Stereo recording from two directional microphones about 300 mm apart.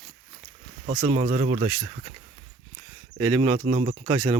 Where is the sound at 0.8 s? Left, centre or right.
Right.